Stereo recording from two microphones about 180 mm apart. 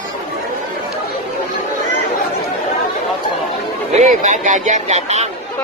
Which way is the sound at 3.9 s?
45° right (ahead or behind).